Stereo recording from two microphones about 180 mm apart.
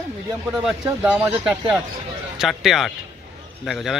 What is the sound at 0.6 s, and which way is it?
Speech, 10° right (ahead or behind).